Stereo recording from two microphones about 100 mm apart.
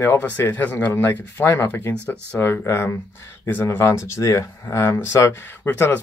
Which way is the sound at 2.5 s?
25° left (ahead or behind).